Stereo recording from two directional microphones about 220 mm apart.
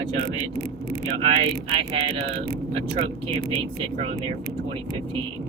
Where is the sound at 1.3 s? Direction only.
25° right (ahead or behind).